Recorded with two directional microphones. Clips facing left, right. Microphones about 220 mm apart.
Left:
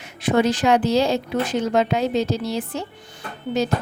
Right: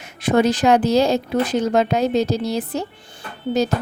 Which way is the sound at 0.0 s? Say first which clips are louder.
Right 2 dB; 45° right (ahead or behind).